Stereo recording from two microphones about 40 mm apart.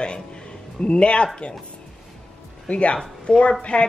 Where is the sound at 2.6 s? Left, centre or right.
Left.